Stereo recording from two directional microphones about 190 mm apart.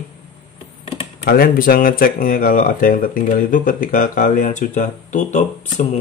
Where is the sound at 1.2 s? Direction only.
50° left (ahead or behind).